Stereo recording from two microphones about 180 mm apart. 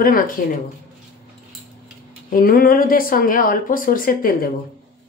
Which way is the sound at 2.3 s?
55° left (ahead or behind).